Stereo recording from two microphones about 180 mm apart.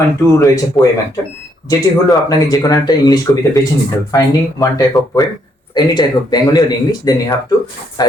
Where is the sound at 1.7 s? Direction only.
20° left (ahead or behind).